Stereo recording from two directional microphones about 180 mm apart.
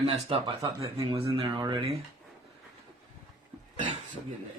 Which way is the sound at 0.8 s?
20° right (ahead or behind).